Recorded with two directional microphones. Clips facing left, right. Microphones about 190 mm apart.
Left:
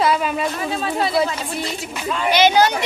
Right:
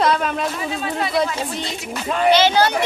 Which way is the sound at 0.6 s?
35° left (ahead or behind).